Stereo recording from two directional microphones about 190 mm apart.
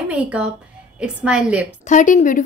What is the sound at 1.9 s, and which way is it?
Speech, 40° left (ahead or behind).